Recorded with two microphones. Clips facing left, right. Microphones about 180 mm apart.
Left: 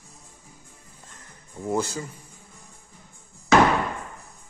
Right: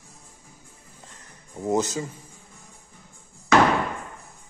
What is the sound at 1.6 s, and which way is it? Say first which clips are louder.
Speech: right 3 dB; 20° right (ahead or behind).